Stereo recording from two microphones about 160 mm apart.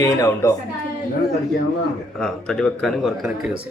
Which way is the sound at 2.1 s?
5° left (ahead or behind).